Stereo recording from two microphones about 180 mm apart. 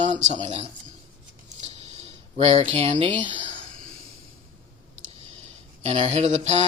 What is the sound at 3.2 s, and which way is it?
Speech, 25° right (ahead or behind).